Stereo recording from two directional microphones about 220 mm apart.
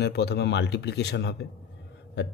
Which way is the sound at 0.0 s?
50° left (ahead or behind).